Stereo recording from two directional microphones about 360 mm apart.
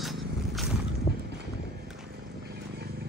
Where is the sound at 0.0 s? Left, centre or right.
Centre.